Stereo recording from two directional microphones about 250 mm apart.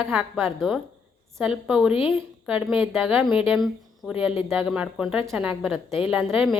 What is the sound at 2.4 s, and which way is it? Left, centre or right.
A woman's voice, centre.